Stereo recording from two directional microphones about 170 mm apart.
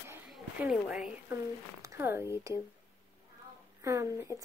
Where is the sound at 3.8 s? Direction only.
20° right (ahead or behind).